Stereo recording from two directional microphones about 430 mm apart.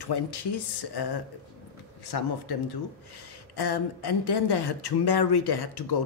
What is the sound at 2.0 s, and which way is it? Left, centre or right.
A woman's voice, left.